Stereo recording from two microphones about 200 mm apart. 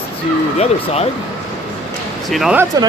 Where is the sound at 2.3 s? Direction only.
5° right (ahead or behind).